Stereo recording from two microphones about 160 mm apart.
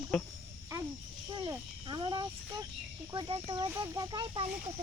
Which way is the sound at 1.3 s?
25° right (ahead or behind).